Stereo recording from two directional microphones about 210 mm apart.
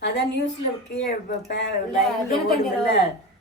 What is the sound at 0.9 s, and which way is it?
Speech, 55° left (ahead or behind).